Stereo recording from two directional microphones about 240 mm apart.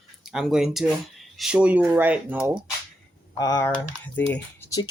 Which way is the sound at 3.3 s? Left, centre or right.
Centre.